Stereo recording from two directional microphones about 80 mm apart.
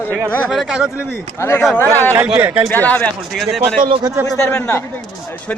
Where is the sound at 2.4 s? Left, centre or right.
Right.